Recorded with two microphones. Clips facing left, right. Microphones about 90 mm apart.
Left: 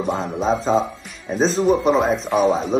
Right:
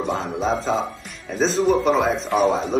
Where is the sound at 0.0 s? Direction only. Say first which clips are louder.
Left 2 dB; centre (ahead or behind).